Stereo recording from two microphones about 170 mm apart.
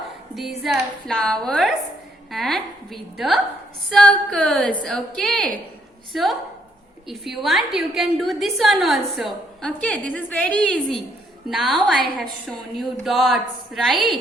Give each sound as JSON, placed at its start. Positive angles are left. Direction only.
{"t": 0.3, "sound": "a woman's voice", "side_deg": 0}